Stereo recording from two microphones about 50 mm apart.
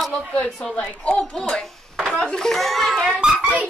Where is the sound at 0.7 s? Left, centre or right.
Centre.